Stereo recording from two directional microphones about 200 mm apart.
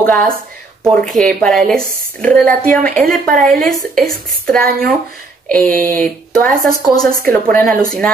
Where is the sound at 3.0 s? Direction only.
45° right (ahead or behind).